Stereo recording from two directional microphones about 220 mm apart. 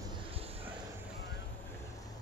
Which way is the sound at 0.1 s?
25° right (ahead or behind).